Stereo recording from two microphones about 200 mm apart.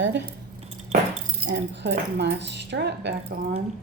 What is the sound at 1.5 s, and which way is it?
Speech, 60° right (ahead or behind).